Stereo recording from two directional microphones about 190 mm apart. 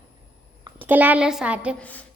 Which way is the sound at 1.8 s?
10° left (ahead or behind).